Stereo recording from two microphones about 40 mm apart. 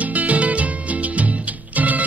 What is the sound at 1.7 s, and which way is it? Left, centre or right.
Music, right.